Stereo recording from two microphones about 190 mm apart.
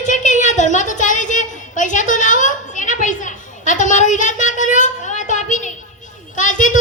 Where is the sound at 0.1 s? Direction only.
40° left (ahead or behind).